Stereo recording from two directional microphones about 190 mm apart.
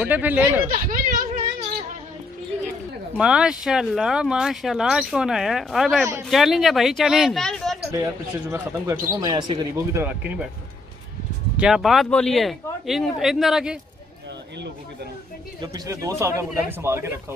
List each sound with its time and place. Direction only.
0.0 s speech: 10° right (ahead or behind)
0.8 s a sound: 45° right (ahead or behind)
3.2 s speech: 5° right (ahead or behind)
7.9 s speech: 15° right (ahead or behind)
11.5 s speech: 5° right (ahead or behind)
15.6 s speech: 20° right (ahead or behind)